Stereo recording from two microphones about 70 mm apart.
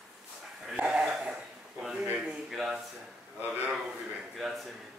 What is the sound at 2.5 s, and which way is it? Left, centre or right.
Speech, centre.